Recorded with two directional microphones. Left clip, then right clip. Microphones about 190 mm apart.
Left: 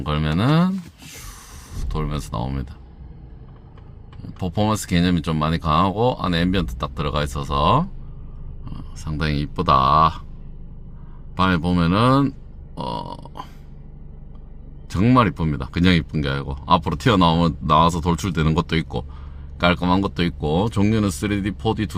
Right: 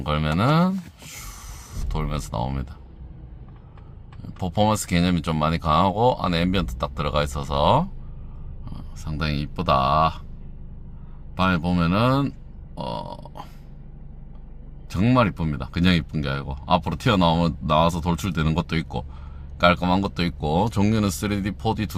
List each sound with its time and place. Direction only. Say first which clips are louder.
0.0 s speech: even; 10° left (ahead or behind)
4.2 s speech: right 1 dB; 10° left (ahead or behind)
11.3 s speech: left 3 dB; 20° left (ahead or behind)
12.7 s burping: left 2 dB; 25° left (ahead or behind)
14.8 s speech: left 3 dB; 20° left (ahead or behind)